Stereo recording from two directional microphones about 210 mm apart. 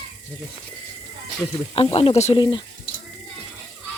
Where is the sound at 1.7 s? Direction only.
25° left (ahead or behind).